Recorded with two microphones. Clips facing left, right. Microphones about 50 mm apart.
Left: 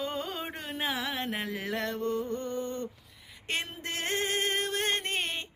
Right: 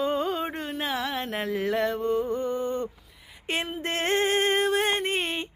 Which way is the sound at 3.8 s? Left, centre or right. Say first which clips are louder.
Right 9 dB; right.